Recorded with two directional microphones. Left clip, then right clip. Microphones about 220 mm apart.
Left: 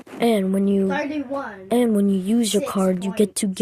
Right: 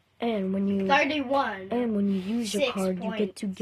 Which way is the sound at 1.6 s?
25° left (ahead or behind).